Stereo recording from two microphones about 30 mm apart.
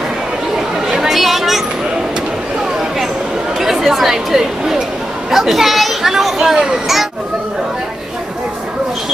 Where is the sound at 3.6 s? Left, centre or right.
Centre.